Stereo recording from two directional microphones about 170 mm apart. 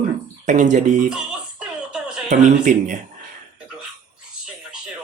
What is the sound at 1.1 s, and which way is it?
Music, 5° right (ahead or behind).